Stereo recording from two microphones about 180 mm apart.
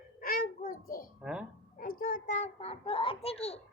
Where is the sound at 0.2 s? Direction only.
55° left (ahead or behind).